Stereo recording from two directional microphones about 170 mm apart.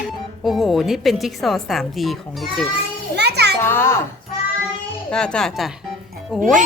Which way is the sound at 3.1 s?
75° right (ahead or behind).